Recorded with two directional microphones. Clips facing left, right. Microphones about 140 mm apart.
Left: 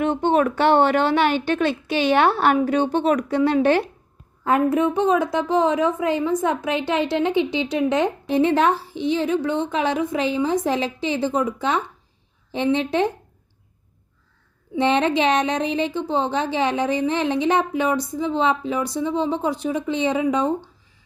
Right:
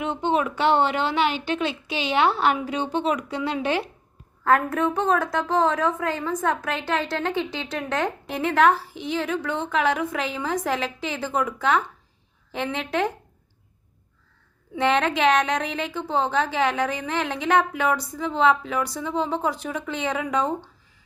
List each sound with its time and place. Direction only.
0.0 s a woman's voice: 55° left (ahead or behind)
4.4 s a woman's voice: 20° left (ahead or behind)
14.8 s a woman's voice: 25° left (ahead or behind)